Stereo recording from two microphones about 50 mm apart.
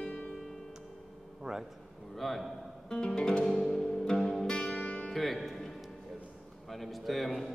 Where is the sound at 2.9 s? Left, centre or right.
Centre.